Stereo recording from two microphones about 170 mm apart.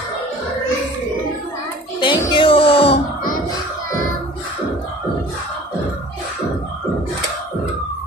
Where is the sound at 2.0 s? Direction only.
30° left (ahead or behind).